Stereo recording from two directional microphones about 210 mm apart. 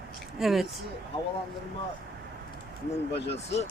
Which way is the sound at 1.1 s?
25° left (ahead or behind).